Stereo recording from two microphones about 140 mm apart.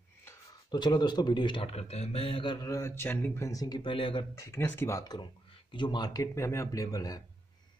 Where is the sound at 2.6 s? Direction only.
20° left (ahead or behind).